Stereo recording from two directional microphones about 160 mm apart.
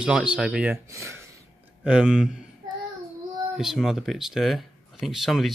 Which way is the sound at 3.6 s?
Centre (ahead or behind).